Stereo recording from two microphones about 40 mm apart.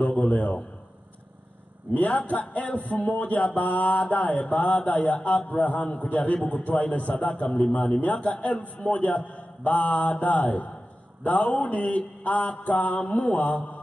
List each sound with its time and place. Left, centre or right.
0.1 s a man's voice: left
2.0 s a man's voice: left
12.2 s mantra: left
13.0 s mantra: left
13.3 s a man's voice: left